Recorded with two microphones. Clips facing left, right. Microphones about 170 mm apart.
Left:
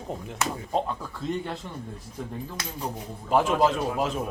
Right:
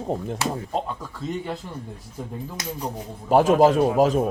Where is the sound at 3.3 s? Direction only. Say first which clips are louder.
Right 6 dB; 45° right (ahead or behind).